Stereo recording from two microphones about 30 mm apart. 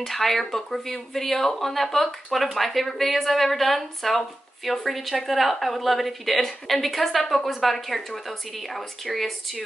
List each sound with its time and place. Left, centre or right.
0.0 s speech: centre